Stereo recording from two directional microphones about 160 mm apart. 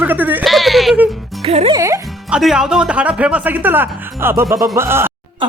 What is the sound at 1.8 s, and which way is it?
Music, 20° right (ahead or behind).